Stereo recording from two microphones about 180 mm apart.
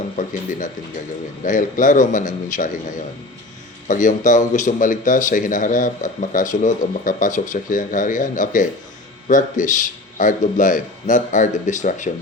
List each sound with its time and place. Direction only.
1.5 s a man's voice: 45° left (ahead or behind)
3.8 s a man's voice: 45° left (ahead or behind)